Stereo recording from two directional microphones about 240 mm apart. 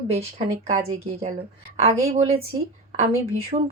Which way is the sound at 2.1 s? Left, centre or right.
Right.